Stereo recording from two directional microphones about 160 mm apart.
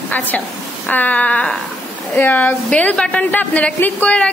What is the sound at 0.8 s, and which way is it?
A woman's voice, 10° left (ahead or behind).